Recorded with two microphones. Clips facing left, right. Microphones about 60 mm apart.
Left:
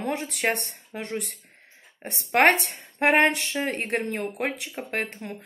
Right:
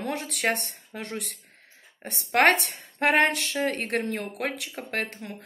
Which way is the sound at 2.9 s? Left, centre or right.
Left.